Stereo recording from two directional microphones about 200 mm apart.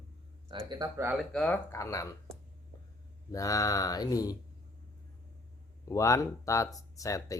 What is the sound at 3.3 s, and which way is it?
Speech, 15° left (ahead or behind).